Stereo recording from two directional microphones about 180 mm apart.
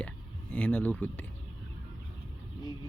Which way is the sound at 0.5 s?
5° left (ahead or behind).